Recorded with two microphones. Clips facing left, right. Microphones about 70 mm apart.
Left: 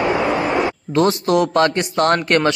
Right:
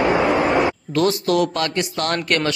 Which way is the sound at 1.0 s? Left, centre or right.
Left.